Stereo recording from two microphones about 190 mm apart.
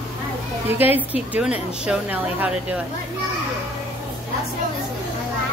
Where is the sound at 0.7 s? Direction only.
10° right (ahead or behind).